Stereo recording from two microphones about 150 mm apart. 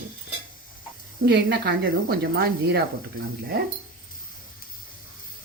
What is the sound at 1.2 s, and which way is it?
Speech, 90° right.